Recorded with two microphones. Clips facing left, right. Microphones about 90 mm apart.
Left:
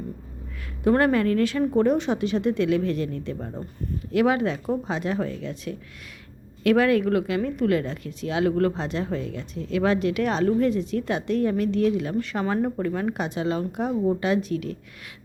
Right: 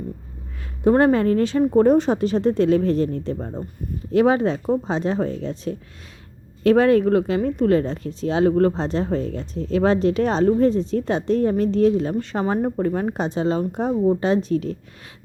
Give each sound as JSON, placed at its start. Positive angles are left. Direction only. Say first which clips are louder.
{"t": 0.9, "sound": "speech", "louder": "right 4 dB", "side_deg": -25}